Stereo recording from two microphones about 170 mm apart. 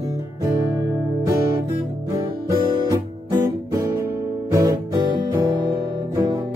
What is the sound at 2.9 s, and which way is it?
Music, 20° right (ahead or behind).